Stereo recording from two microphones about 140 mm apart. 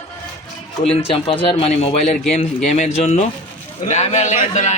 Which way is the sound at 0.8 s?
45° left (ahead or behind).